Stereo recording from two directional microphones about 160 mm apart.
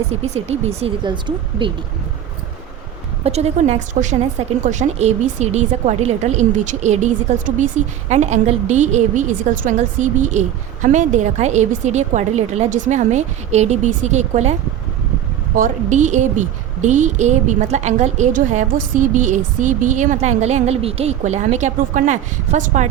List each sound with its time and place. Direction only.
0.1 s speech: 40° right (ahead or behind)
3.2 s a woman's voice: 40° right (ahead or behind)
15.5 s a woman's voice: 50° right (ahead or behind)